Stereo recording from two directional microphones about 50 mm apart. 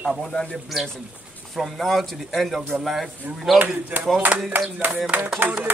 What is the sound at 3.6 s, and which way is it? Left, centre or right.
Speech, right.